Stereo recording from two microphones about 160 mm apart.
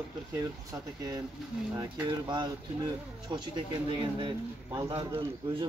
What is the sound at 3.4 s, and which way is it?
Speech, 30° right (ahead or behind).